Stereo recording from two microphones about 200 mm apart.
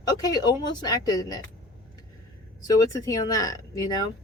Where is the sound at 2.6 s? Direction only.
20° left (ahead or behind).